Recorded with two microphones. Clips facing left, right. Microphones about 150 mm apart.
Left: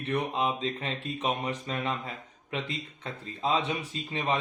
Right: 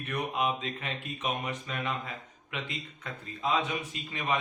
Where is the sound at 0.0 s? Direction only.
30° left (ahead or behind).